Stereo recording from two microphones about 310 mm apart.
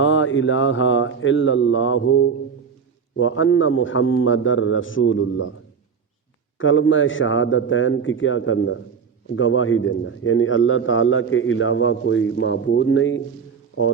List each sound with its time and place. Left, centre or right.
0.0 s a man's voice: left
6.6 s a man's voice: left